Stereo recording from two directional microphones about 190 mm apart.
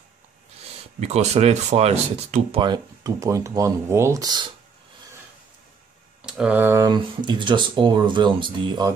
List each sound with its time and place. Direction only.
1.0 s speech: 35° right (ahead or behind)
6.2 s speech: 5° right (ahead or behind); by 8.9 s 25° right (ahead or behind)